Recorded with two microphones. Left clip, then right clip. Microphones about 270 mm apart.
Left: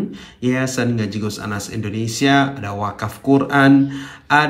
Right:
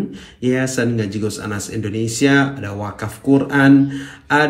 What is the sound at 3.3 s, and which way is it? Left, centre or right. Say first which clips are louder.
Speech: even; centre.